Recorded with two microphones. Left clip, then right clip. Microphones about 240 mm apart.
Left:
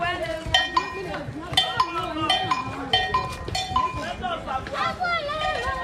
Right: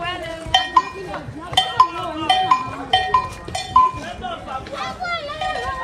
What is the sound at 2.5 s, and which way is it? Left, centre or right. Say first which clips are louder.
Cowbell: right 6 dB; right.